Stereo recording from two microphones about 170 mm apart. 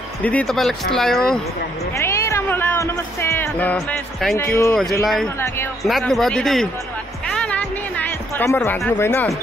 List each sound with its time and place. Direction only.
0.2 s speech: 10° left (ahead or behind)
2.0 s speech: 15° left (ahead or behind)
4.4 s speech: 20° left (ahead or behind)
5.0 s speech: centre (ahead or behind)
7.3 s music: 5° left (ahead or behind)
8.9 s speech: 15° left (ahead or behind)